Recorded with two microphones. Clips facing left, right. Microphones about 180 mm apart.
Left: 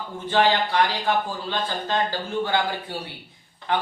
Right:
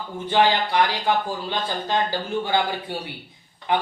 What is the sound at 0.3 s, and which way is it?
Speech, 15° right (ahead or behind).